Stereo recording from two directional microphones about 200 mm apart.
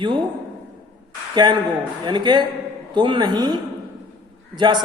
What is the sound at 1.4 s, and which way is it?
A man's voice, 25° right (ahead or behind).